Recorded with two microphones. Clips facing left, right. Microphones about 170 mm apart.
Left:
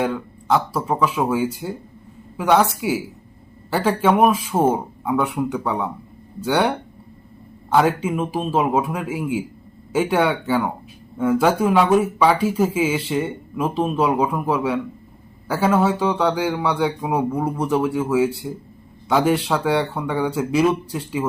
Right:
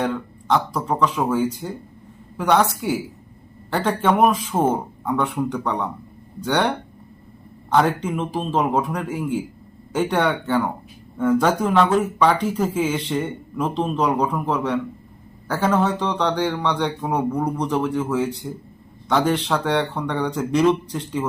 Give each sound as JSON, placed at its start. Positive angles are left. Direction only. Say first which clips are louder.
{"t": 0.0, "sound": "speech", "louder": "left 1 dB", "side_deg": 5}